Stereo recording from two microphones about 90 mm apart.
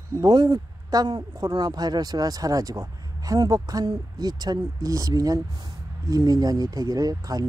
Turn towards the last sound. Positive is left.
turn(degrees=-40)  # may be behind; listen again after turning